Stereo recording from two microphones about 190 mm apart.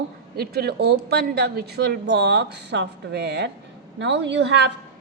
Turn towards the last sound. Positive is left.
turn(degrees=-65)  # may be behind; listen again after turning